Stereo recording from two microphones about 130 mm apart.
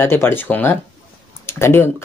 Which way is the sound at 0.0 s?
15° left (ahead or behind).